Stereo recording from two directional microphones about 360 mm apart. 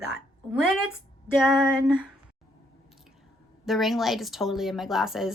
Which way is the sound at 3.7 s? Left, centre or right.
Centre.